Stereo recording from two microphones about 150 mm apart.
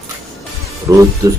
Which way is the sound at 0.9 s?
20° right (ahead or behind).